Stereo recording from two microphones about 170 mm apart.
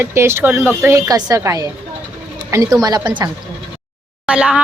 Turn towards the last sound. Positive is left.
turn(degrees=-5)  # may be behind; listen again after turning